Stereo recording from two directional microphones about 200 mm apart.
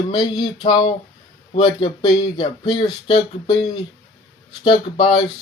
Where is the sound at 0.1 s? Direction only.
20° left (ahead or behind).